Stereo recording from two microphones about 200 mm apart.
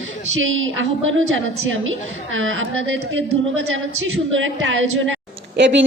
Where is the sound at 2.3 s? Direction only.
80° right.